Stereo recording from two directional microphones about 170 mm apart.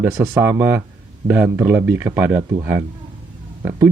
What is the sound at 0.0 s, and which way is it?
Speech, 15° right (ahead or behind).